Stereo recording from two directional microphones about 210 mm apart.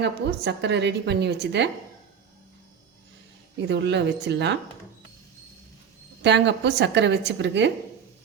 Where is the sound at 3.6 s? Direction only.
55° right (ahead or behind).